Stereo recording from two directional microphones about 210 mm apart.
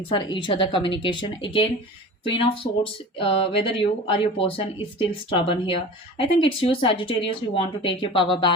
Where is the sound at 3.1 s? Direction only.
25° left (ahead or behind).